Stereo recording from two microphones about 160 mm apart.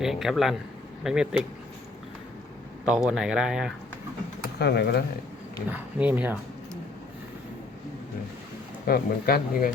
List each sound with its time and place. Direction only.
0.0 s speech: centre (ahead or behind)
2.8 s speech: 5° right (ahead or behind)
4.5 s speech: 90° left
5.6 s speech: 10° right (ahead or behind)
8.9 s speech: 70° left (ahead or behind)